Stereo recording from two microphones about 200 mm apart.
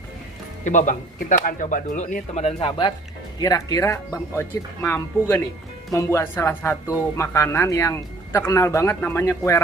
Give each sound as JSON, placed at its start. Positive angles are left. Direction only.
{"t": 0.6, "sound": "speech", "side_deg": 40}